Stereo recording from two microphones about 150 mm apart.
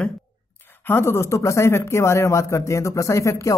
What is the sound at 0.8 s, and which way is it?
Speech, 15° left (ahead or behind).